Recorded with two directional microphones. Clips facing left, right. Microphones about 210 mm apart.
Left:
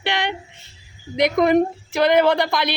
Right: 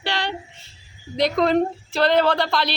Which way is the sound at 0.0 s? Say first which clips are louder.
Left 3 dB; 20° left (ahead or behind).